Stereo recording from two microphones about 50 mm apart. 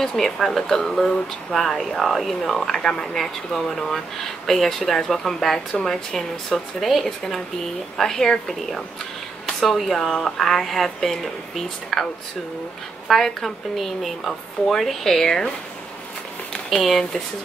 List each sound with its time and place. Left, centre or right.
0.0 s speech: centre
13.1 s speech: centre
16.8 s speech: centre